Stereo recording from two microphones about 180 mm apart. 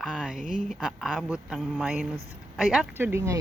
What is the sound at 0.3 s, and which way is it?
Speech, 45° right (ahead or behind).